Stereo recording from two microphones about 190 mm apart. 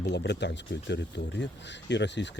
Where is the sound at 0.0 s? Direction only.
65° left (ahead or behind).